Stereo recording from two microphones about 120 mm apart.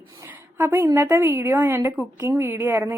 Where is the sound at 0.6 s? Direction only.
20° right (ahead or behind).